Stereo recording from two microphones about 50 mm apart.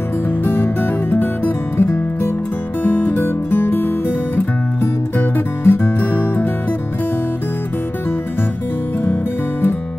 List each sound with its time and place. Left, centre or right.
0.4 s music: left
5.6 s music: left